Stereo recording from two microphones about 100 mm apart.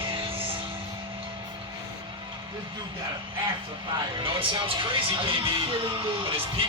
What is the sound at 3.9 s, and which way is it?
Speech, 60° right (ahead or behind).